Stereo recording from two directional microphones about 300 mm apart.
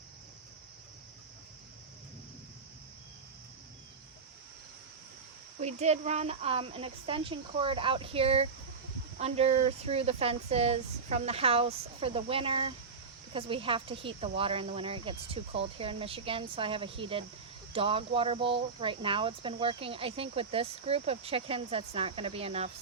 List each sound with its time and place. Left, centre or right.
5.5 s speech: right